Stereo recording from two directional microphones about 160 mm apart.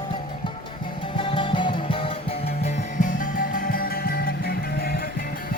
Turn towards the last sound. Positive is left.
turn(degrees=70)  # may be behind; listen again after turning